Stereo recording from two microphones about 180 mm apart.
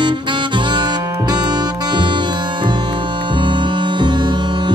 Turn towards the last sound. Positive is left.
turn(degrees=-25)  # may be behind; listen again after turning